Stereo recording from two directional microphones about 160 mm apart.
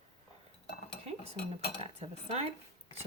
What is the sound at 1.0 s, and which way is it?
Dishes, 40° right (ahead or behind).